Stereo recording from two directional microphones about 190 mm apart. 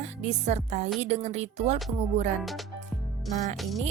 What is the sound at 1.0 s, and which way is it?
Music, 35° right (ahead or behind).